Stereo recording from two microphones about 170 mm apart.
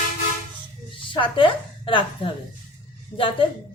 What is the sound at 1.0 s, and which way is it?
A woman's voice, 30° left (ahead or behind).